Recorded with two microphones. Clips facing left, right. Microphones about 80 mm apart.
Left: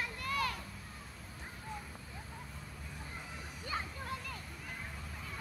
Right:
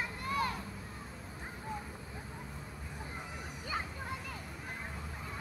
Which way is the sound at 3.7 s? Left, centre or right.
Centre.